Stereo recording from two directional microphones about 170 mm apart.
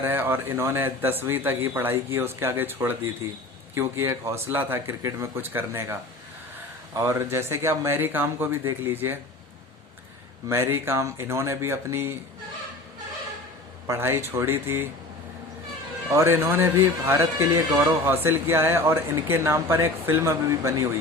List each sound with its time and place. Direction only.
0.0 s speech: 15° right (ahead or behind)
10.5 s speech: 15° right (ahead or behind)
13.8 s speech: 15° right (ahead or behind)
16.0 s speech: 15° right (ahead or behind)